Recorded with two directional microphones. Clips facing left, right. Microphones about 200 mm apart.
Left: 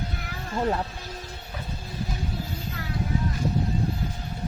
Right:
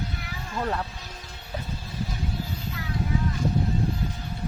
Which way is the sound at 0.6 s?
20° left (ahead or behind).